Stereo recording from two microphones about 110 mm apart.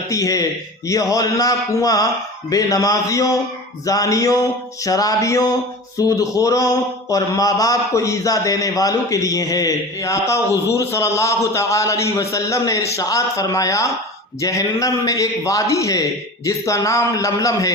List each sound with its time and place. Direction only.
0.1 s a man's voice: 30° left (ahead or behind)